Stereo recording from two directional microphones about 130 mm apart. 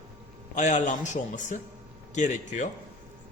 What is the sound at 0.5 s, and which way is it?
A man's voice, 70° left (ahead or behind).